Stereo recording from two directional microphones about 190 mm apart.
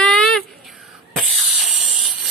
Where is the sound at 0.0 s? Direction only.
5° left (ahead or behind).